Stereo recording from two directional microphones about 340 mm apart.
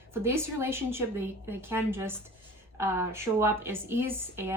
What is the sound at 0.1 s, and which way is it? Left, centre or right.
A woman's voice, centre.